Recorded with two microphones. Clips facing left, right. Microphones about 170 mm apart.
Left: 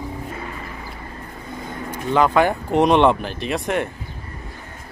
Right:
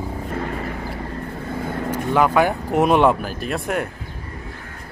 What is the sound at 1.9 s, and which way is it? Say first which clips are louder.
Speech: even; 10° right (ahead or behind).